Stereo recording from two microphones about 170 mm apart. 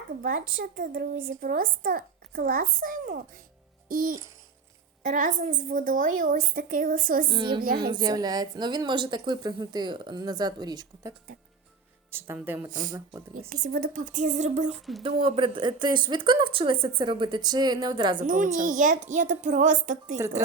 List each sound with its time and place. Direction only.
0.2 s a woman's voice: 55° right (ahead or behind)
7.3 s a woman's voice: 25° right (ahead or behind)
7.6 s speech: 60° right (ahead or behind)
7.9 s a woman's voice: 25° right (ahead or behind)
12.1 s speech: 10° right (ahead or behind)
12.9 s a woman's voice: 20° right (ahead or behind)
13.5 s a woman's voice: 60° right (ahead or behind); by 14.8 s 45° right (ahead or behind)
15.0 s a woman's voice: 30° right (ahead or behind)
18.2 s a woman's voice: 50° right (ahead or behind)
20.1 s speech: 15° right (ahead or behind)